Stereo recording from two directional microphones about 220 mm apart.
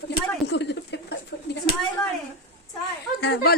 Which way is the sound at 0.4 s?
50° left (ahead or behind).